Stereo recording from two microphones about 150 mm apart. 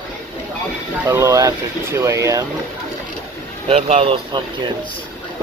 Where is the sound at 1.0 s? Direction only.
20° right (ahead or behind).